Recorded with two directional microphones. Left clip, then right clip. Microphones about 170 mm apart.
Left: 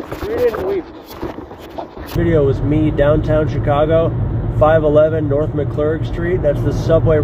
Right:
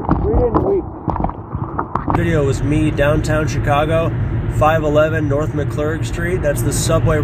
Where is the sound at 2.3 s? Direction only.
15° right (ahead or behind).